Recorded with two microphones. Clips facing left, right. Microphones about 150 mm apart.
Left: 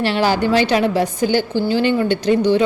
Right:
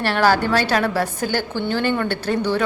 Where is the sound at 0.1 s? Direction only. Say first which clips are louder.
Right 3 dB; 45° right (ahead or behind).